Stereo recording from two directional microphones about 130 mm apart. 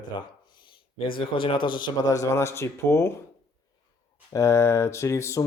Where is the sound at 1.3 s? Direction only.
40° left (ahead or behind).